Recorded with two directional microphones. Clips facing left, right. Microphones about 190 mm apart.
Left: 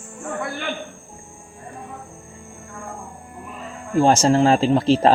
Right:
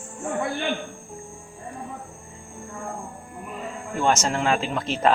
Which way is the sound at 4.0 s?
30° left (ahead or behind).